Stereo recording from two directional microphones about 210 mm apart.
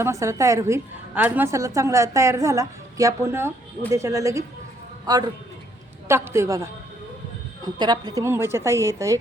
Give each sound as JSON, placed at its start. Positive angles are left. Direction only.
{"t": 0.0, "sound": "a woman's voice", "side_deg": -15}
{"t": 7.8, "sound": "a woman's voice", "side_deg": -20}